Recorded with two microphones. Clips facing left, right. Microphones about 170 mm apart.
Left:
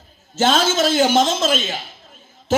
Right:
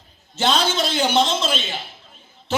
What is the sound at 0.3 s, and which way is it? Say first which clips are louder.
A man's voice: left 3 dB; 45° left (ahead or behind).